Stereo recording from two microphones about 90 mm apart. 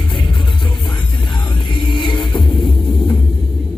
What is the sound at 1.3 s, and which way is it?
Music, 60° left (ahead or behind).